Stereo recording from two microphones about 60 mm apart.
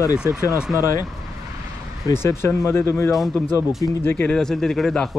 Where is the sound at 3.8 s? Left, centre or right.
Left.